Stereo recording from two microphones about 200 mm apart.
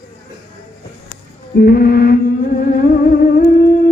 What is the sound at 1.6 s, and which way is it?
Music, 50° left (ahead or behind).